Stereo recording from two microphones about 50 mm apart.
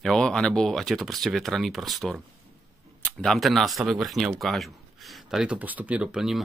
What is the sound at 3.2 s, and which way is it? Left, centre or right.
Speech, centre.